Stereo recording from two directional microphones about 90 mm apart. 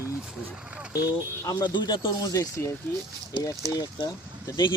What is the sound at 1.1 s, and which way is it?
Speech, 45° left (ahead or behind).